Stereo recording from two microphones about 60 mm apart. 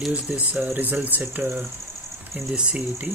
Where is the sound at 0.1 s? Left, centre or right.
Right.